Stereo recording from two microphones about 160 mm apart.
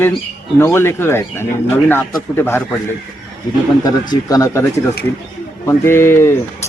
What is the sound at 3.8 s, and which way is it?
Speech, 25° left (ahead or behind).